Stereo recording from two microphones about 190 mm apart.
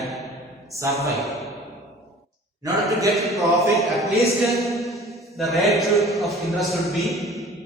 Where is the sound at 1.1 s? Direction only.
Centre (ahead or behind).